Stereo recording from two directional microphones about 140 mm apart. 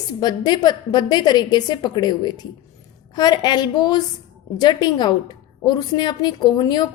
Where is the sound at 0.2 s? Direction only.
30° left (ahead or behind).